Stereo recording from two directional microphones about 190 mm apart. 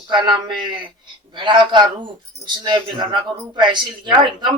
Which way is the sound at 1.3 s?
25° right (ahead or behind).